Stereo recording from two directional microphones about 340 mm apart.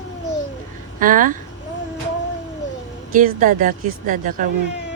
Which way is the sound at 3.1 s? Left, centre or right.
Right.